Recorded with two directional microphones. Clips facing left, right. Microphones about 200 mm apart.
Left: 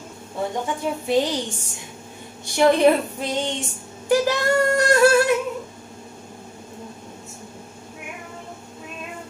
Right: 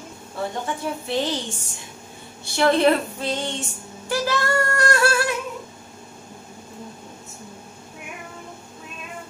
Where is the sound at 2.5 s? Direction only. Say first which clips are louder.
Left 2 dB; 15° left (ahead or behind).